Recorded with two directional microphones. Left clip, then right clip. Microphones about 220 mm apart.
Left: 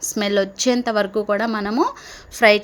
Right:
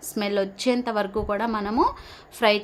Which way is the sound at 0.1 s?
15° left (ahead or behind).